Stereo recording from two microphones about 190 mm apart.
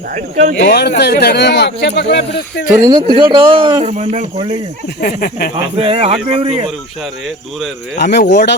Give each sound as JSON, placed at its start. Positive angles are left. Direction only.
{"t": 0.1, "sound": "speech", "side_deg": -40}
{"t": 0.6, "sound": "speech", "side_deg": 60}
{"t": 2.8, "sound": "speech", "side_deg": -30}
{"t": 3.8, "sound": "speech", "side_deg": -35}
{"t": 4.4, "sound": "speech", "side_deg": -25}
{"t": 4.9, "sound": "a sound", "side_deg": 50}
{"t": 5.7, "sound": "speech", "side_deg": -30}
{"t": 8.1, "sound": "speech", "side_deg": 55}